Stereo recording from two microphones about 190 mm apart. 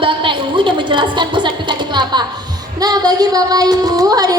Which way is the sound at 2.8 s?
20° right (ahead or behind).